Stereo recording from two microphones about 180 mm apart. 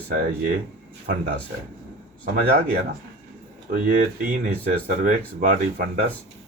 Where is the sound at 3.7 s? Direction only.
50° right (ahead or behind).